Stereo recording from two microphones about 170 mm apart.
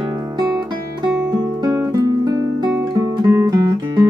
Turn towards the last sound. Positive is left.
turn(degrees=-25)  # may be behind; listen again after turning